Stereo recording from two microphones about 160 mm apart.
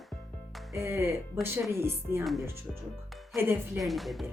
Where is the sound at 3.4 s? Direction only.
15° right (ahead or behind).